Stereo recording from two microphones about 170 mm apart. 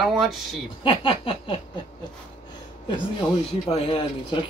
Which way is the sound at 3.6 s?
35° left (ahead or behind).